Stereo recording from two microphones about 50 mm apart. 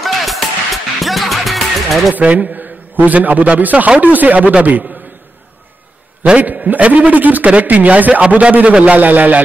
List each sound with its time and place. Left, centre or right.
0.0 s music: centre
2.1 s a man's voice: right
6.4 s a man's voice: right